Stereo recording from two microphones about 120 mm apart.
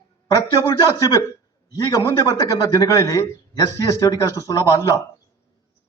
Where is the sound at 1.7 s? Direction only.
35° left (ahead or behind).